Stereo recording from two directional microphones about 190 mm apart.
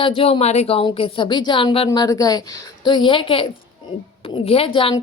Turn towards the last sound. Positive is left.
turn(degrees=30)  # may be behind; listen again after turning